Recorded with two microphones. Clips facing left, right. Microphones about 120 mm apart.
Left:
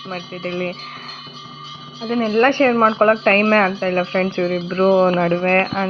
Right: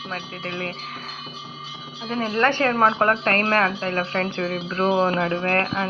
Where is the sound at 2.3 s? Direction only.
45° left (ahead or behind).